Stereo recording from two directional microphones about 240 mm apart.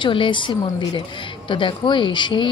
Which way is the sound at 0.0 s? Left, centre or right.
Left.